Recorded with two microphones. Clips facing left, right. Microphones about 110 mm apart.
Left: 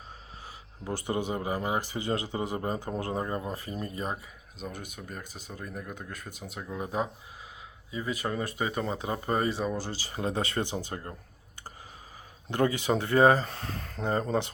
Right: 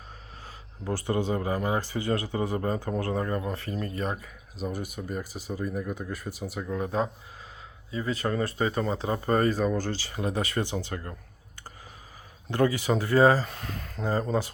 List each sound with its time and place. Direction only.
0.4 s speech: 15° left (ahead or behind)
4.5 s speech: 5° right (ahead or behind); by 8.8 s 15° left (ahead or behind)
8.8 s speech: 30° right (ahead or behind)
9.2 s speech: 10° left (ahead or behind)
10.1 s speech: 30° left (ahead or behind)
12.5 s speech: 20° left (ahead or behind)
13.4 s speech: 35° left (ahead or behind)